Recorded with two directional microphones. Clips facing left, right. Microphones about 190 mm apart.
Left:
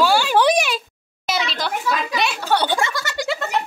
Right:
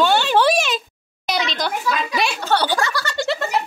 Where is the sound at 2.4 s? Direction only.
20° left (ahead or behind).